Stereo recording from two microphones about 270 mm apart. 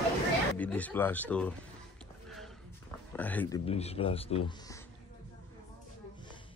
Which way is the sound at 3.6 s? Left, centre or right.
Left.